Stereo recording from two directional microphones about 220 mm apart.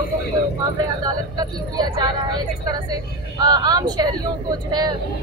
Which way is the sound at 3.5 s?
20° right (ahead or behind).